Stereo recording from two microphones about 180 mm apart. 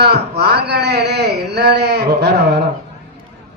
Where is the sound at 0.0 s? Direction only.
65° right (ahead or behind).